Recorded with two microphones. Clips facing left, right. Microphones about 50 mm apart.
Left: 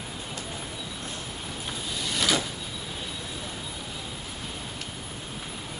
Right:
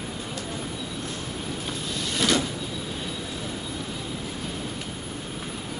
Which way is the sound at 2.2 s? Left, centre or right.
Centre.